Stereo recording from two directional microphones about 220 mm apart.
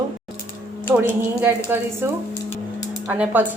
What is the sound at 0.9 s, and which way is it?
Speech, 10° right (ahead or behind).